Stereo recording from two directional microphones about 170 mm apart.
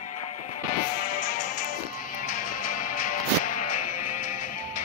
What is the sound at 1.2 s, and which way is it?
Music, 45° left (ahead or behind).